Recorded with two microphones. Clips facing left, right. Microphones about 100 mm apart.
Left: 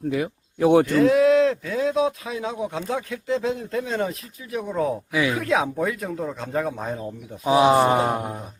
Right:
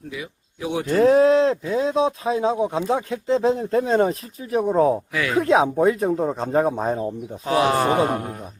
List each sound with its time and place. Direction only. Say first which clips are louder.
0.1 s speech: left 7 dB; 55° left (ahead or behind)
0.9 s speech: right 2 dB; 35° right (ahead or behind)
7.4 s speech: left 2 dB; 15° left (ahead or behind)